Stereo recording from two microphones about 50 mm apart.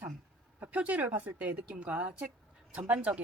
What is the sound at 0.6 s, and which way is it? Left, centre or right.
Speech, right.